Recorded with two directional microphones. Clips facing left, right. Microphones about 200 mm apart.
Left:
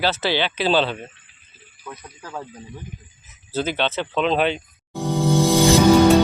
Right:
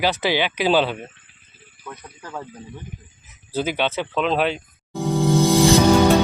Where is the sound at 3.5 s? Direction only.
10° right (ahead or behind).